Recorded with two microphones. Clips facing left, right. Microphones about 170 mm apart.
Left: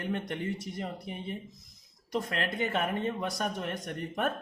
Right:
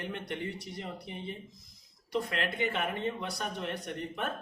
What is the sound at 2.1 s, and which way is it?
Speech, 45° left (ahead or behind).